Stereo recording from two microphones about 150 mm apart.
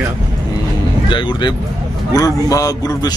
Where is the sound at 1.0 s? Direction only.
30° left (ahead or behind).